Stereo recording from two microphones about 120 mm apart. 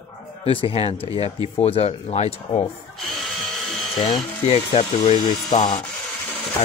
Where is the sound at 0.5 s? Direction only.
50° left (ahead or behind).